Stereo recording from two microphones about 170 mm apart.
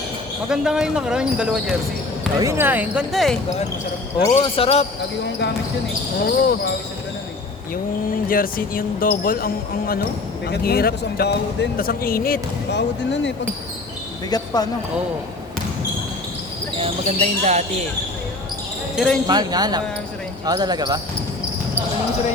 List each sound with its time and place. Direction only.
0.5 s speech: 5° right (ahead or behind)
2.4 s speech: 15° right (ahead or behind); by 3.3 s centre (ahead or behind)
4.4 s speech: 35° left (ahead or behind)
6.2 s speech: 65° left (ahead or behind)
8.3 s speech: 55° left (ahead or behind)
14.3 s speech: 25° left (ahead or behind)
16.7 s speech: 40° right (ahead or behind)
18.9 s speech: 5° left (ahead or behind)
19.3 s speech: 25° right (ahead or behind)